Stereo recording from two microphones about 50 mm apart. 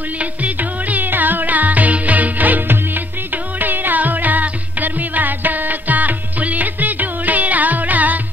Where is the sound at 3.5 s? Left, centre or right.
Right.